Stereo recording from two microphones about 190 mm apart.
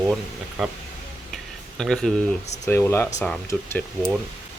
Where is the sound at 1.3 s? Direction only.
Centre (ahead or behind).